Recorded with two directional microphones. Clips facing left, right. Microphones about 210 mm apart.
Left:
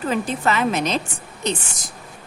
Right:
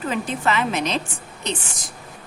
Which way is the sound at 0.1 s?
40° left (ahead or behind).